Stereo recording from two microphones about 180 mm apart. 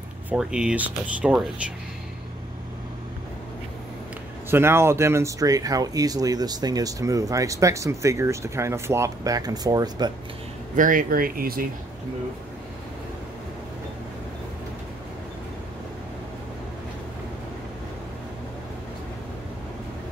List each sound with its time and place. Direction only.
0.3 s speech: 5° right (ahead or behind)
4.5 s speech: 15° right (ahead or behind)
10.8 s speech: 50° right (ahead or behind)